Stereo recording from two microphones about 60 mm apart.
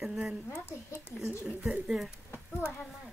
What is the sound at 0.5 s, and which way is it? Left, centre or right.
Speech, left.